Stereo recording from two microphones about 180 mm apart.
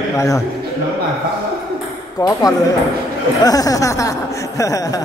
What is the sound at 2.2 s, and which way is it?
Speech, 20° left (ahead or behind).